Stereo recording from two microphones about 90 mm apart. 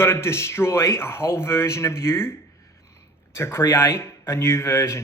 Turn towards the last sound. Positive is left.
turn(degrees=35)  # may be behind; listen again after turning